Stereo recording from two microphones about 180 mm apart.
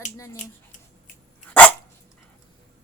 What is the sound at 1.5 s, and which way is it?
Dog, 5° left (ahead or behind).